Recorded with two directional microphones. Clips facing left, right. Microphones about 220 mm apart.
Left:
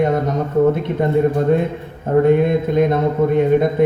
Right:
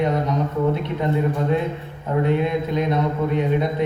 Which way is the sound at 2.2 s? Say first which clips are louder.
Left 6 dB; 50° left (ahead or behind).